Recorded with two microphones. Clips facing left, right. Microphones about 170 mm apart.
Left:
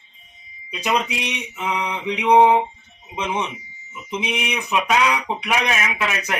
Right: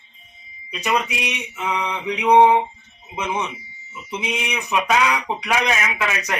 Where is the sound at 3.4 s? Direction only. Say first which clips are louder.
Even; 15° left (ahead or behind).